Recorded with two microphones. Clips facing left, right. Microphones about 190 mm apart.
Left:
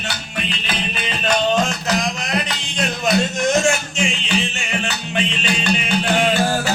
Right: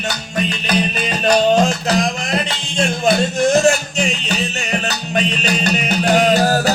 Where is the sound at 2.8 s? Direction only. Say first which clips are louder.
Right 3 dB; 35° right (ahead or behind).